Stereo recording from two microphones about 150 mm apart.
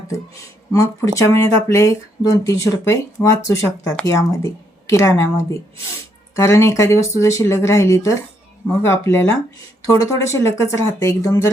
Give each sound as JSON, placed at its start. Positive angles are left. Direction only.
{"t": 0.7, "sound": "speech", "side_deg": 20}
{"t": 6.3, "sound": "speech", "side_deg": 20}